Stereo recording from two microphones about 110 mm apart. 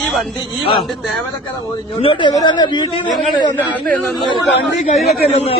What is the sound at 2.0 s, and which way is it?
Speech, 55° left (ahead or behind).